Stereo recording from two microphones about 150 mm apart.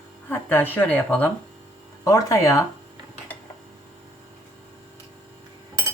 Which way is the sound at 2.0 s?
20° left (ahead or behind).